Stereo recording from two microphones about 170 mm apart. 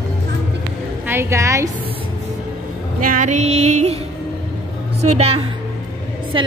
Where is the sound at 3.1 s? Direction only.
45° right (ahead or behind).